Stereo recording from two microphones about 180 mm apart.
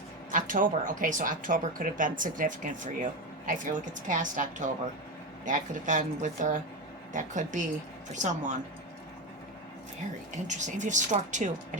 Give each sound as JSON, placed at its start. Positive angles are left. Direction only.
{"t": 0.3, "sound": "speech", "side_deg": -50}
{"t": 10.3, "sound": "speech", "side_deg": -40}